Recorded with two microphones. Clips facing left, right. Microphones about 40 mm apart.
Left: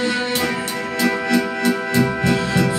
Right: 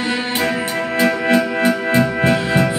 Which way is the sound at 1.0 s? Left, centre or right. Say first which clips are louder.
Right 2 dB; right.